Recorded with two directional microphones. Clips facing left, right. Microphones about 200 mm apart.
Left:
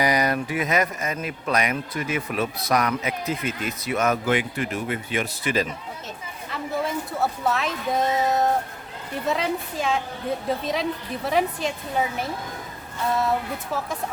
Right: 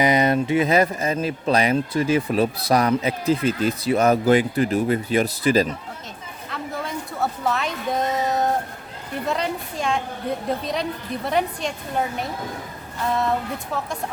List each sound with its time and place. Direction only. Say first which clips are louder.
0.0 s speech: right 4 dB; 25° right (ahead or behind)
6.5 s a woman's voice: left 3 dB; centre (ahead or behind)